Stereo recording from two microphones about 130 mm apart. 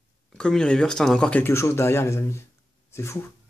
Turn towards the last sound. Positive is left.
turn(degrees=20)  # may be behind; listen again after turning